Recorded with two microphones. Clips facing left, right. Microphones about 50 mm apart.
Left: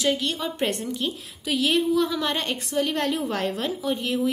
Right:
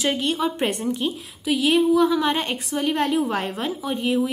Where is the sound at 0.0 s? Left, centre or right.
Right.